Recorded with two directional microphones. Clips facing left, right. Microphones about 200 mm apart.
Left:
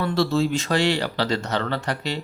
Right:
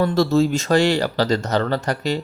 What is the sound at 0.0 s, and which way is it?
Speech, 45° right (ahead or behind).